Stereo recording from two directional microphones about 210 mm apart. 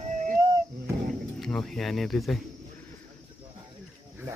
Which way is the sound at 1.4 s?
5° left (ahead or behind).